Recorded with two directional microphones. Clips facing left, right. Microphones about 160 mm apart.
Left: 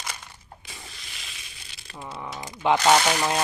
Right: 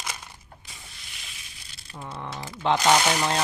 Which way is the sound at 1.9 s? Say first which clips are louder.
Even; 5° left (ahead or behind).